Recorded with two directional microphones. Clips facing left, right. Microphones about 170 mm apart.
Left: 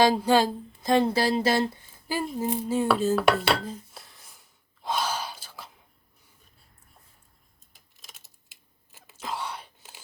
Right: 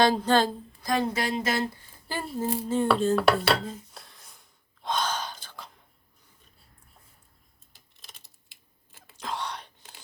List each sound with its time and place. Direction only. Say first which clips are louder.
0.0 s speech: left 1 dB; 10° left (ahead or behind)
0.8 s speech: left 5 dB; 25° left (ahead or behind)
2.4 s dishes: right 1 dB; 10° left (ahead or behind)
8.9 s a sound: even; 5° left (ahead or behind)